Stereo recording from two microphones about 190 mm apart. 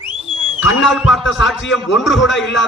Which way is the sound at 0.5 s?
90° left.